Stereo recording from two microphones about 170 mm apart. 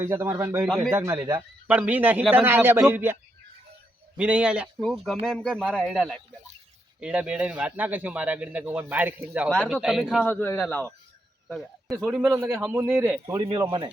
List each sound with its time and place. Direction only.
0.0 s a man's voice: 15° right (ahead or behind)
4.2 s a man's voice: 5° right (ahead or behind)
10.2 s a man's voice: 10° left (ahead or behind)
11.4 s a sound: centre (ahead or behind)
11.9 s a man's voice: 10° right (ahead or behind)
13.5 s speech: 25° right (ahead or behind)